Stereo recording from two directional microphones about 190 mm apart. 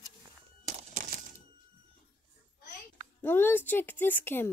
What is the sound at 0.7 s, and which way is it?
Crumpling, 40° right (ahead or behind).